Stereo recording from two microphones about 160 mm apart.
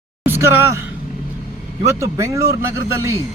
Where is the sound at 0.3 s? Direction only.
15° right (ahead or behind).